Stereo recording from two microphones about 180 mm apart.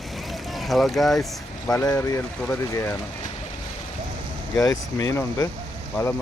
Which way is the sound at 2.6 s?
15° left (ahead or behind).